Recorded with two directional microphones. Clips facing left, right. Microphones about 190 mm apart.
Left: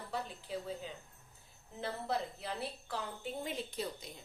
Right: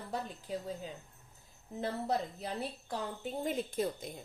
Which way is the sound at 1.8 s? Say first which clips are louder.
Right 3 dB; 40° right (ahead or behind).